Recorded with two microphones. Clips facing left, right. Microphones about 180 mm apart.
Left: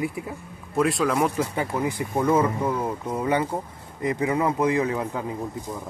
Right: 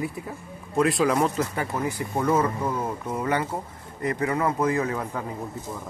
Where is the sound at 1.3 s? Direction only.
20° left (ahead or behind).